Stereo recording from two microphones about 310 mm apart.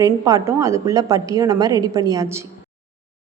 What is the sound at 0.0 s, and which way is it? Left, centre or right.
Speech, centre.